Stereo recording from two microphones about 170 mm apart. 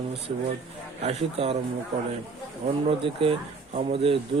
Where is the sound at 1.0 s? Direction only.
35° right (ahead or behind).